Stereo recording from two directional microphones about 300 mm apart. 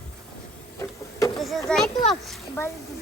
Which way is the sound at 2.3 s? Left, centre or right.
Centre.